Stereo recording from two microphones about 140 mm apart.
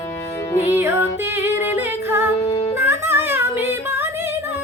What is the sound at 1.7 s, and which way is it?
A capella, 15° right (ahead or behind).